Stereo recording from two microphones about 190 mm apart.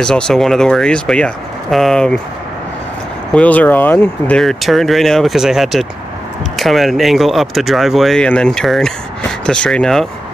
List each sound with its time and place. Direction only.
0.0 s speech: 5° left (ahead or behind)
3.3 s speech: 10° left (ahead or behind)